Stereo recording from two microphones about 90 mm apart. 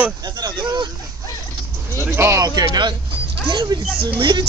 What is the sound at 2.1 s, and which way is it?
Speech, 30° right (ahead or behind).